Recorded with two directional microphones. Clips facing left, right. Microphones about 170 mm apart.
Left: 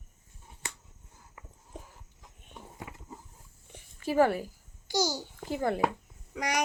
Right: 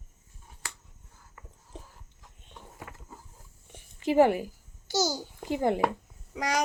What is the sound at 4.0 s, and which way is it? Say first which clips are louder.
A child's voice: right 3 dB; 20° right (ahead or behind).